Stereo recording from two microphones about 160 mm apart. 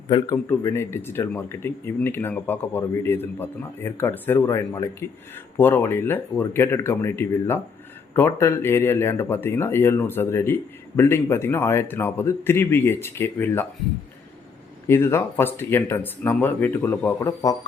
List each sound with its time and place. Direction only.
0.1 s speech: 20° left (ahead or behind)
14.8 s speech: 15° left (ahead or behind)
17.2 s speech: 20° left (ahead or behind)